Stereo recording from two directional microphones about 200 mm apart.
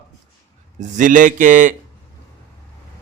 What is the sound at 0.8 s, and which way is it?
Speech, 40° right (ahead or behind).